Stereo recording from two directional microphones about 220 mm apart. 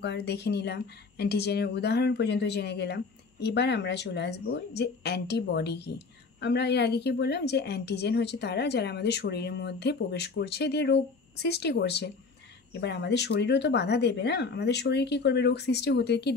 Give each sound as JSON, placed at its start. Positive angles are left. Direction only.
{"t": 0.0, "sound": "a woman's voice", "side_deg": 50}